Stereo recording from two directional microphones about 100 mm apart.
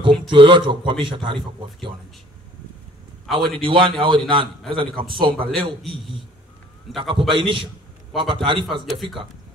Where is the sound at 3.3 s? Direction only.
60° right (ahead or behind).